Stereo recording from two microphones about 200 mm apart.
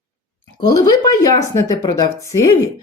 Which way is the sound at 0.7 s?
20° left (ahead or behind).